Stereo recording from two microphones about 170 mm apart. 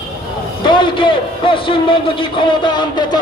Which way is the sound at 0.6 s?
25° left (ahead or behind).